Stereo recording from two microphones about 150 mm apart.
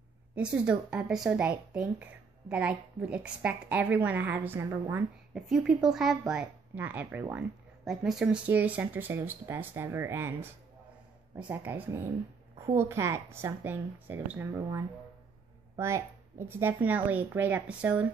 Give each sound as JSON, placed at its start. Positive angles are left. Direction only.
{"t": 0.4, "sound": "speech", "side_deg": -5}
{"t": 5.3, "sound": "a woman's voice", "side_deg": -5}
{"t": 7.8, "sound": "speech", "side_deg": 0}